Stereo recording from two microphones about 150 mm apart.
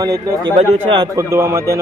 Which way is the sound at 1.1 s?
20° right (ahead or behind).